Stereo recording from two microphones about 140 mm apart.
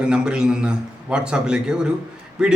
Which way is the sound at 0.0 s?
5° right (ahead or behind).